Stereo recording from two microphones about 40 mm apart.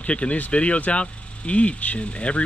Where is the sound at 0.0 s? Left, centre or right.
Left.